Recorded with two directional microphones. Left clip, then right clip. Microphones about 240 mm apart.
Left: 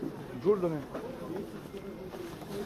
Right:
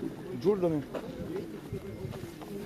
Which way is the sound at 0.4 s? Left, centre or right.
Right.